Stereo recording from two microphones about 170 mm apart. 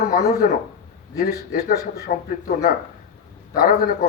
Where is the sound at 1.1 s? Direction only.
60° left (ahead or behind).